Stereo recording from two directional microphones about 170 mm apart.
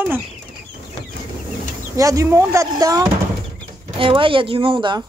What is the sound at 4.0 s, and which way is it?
Speech, 30° right (ahead or behind).